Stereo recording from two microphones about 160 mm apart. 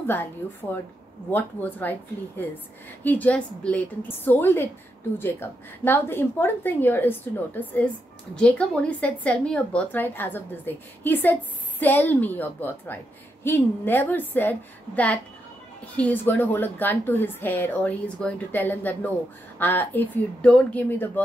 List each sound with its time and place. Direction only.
0.0 s a woman's voice: 10° left (ahead or behind)